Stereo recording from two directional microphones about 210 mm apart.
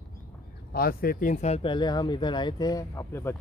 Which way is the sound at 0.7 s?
45° left (ahead or behind).